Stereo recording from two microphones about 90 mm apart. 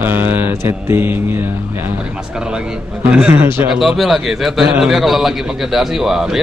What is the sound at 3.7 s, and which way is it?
A man's voice, centre (ahead or behind).